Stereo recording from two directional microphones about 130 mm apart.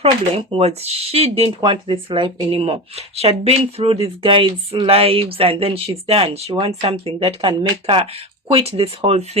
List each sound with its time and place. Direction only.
0.0 s speech: 50° right (ahead or behind)